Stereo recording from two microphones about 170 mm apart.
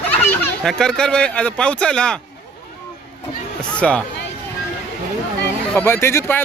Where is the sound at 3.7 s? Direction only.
5° left (ahead or behind).